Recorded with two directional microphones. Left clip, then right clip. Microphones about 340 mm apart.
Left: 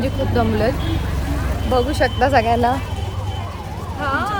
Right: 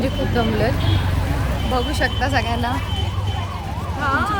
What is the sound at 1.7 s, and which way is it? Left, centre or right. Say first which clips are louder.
Speech: left 4 dB; centre.